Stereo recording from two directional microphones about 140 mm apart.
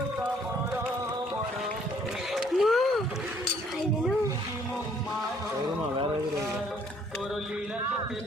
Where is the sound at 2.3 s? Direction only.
Centre (ahead or behind).